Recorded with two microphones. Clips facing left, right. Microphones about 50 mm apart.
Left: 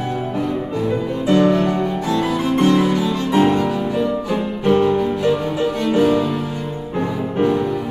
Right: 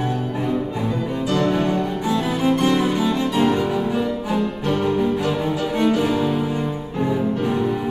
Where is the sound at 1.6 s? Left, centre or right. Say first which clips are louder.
Left 2 dB; left.